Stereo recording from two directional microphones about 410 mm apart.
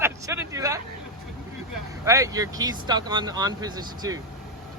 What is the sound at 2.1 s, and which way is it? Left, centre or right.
Speech, centre.